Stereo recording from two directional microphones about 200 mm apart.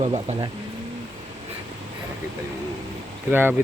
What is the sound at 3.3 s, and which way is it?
Speech, 10° right (ahead or behind).